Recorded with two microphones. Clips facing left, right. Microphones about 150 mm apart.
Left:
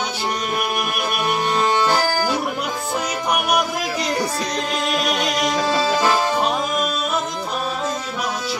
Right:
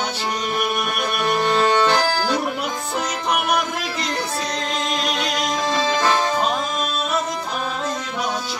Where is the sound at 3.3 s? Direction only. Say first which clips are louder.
Left 1 dB; 10° left (ahead or behind).